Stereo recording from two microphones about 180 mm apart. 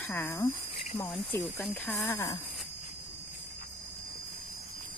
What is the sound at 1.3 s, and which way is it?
Speech, 10° left (ahead or behind).